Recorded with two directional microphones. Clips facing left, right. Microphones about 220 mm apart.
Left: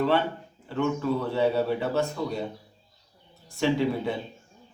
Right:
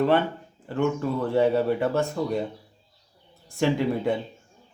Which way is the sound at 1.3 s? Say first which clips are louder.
Right 5 dB; 50° right (ahead or behind).